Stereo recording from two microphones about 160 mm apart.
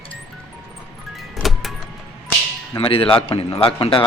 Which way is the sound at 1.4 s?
Centre (ahead or behind).